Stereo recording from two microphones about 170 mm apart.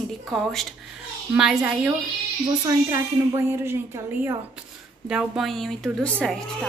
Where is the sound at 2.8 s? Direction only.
15° right (ahead or behind).